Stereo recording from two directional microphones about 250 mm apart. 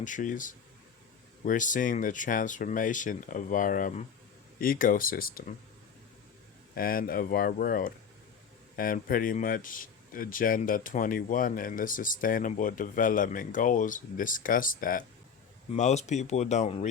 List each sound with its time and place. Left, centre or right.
0.0 s speech: left
6.7 s speech: left